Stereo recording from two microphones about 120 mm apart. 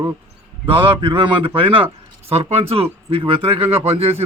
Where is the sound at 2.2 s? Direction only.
55° right (ahead or behind).